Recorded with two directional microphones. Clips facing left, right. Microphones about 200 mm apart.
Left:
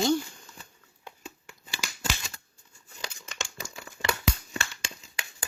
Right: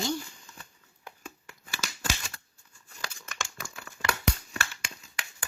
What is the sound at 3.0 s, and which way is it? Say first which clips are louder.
Crumpling: left 1 dB; 20° left (ahead or behind).